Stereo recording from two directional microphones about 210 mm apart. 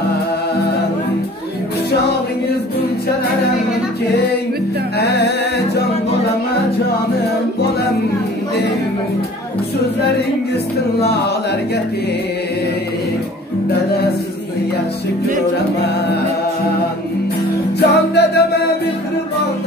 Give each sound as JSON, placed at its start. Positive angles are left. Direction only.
{"t": 4.9, "sound": "music", "side_deg": 50}
{"t": 17.7, "sound": "music", "side_deg": 50}